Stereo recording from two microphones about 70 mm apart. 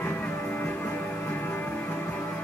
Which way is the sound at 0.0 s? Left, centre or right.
Left.